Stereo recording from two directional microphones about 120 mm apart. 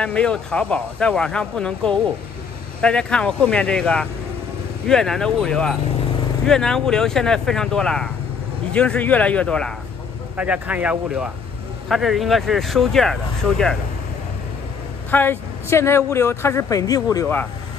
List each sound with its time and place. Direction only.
0.0 s speech: 5° left (ahead or behind)
10.3 s speech: 10° right (ahead or behind)
15.0 s speech: 15° left (ahead or behind)